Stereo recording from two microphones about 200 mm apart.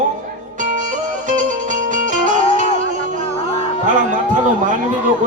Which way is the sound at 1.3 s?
40° right (ahead or behind).